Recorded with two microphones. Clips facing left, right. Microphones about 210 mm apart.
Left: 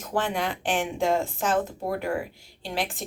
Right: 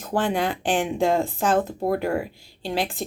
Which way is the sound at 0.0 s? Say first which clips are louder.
Right 4 dB; 30° right (ahead or behind).